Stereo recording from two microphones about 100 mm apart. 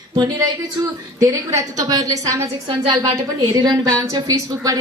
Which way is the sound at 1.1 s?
35° right (ahead or behind).